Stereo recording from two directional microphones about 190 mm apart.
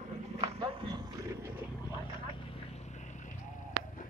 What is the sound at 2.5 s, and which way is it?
Vehicle, 35° left (ahead or behind).